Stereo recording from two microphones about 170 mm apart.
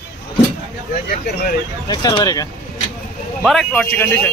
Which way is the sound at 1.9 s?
25° left (ahead or behind).